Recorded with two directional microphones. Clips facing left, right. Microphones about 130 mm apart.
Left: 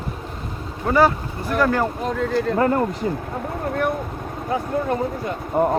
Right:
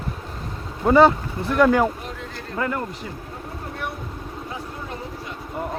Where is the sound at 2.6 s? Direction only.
35° left (ahead or behind).